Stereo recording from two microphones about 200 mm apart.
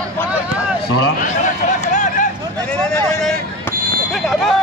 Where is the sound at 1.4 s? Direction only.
40° left (ahead or behind).